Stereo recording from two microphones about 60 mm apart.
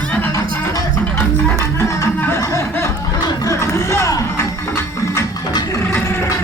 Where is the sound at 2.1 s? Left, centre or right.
Left.